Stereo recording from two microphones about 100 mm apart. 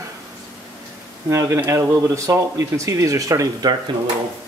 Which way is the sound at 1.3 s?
30° right (ahead or behind).